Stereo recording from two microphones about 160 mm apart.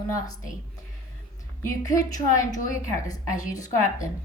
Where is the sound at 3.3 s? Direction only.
50° left (ahead or behind).